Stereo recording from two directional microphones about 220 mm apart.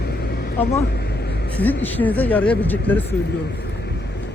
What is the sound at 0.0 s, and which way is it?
Vehicle, 45° left (ahead or behind).